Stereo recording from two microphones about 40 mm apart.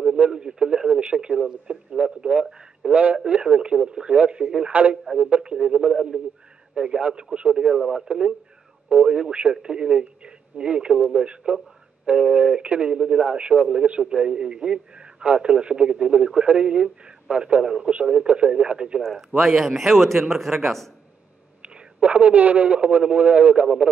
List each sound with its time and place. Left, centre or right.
0.0 s speech: centre
2.9 s a man's voice: right; by 7.8 s centre
8.1 s a man's voice: right
8.8 s a man's voice: right
19.0 s a man's voice: centre
21.6 s a man's voice: right